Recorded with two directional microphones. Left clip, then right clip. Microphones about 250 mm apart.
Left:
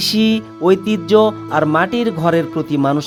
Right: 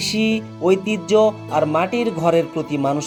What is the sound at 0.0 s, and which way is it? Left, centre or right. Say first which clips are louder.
Speech: left 4 dB; left.